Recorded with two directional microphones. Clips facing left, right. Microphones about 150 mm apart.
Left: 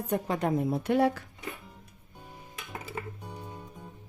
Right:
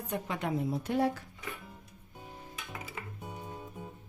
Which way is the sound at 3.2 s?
5° right (ahead or behind).